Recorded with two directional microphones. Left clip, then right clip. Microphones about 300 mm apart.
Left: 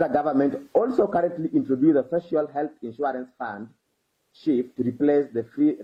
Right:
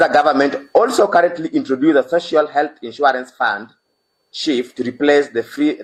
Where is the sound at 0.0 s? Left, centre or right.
Centre.